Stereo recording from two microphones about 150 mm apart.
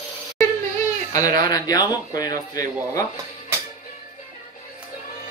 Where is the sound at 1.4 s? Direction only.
25° left (ahead or behind).